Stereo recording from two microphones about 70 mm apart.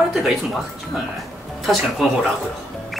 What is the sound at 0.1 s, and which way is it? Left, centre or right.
Speech, centre.